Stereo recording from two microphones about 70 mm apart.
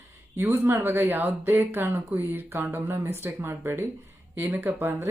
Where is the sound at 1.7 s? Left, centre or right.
Right.